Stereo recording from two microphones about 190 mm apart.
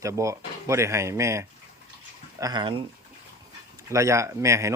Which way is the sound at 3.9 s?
15° right (ahead or behind).